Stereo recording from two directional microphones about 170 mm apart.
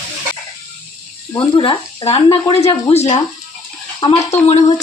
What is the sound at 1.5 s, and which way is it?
Speech, 30° left (ahead or behind).